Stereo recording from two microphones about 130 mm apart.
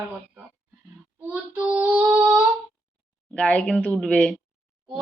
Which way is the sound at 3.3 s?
10° left (ahead or behind).